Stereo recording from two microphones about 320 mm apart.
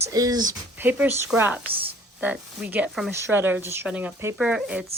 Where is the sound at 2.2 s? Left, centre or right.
Centre.